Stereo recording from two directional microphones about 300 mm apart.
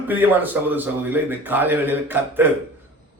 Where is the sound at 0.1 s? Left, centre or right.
Centre.